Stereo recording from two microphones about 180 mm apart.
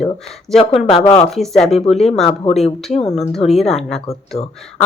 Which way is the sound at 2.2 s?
35° left (ahead or behind).